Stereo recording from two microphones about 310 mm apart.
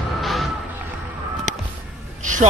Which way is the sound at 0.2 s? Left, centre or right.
Centre.